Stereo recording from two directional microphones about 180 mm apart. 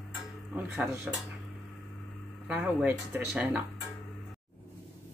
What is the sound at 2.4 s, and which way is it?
Speech, 5° right (ahead or behind).